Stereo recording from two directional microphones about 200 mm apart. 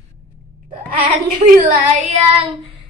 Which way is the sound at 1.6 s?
45° right (ahead or behind).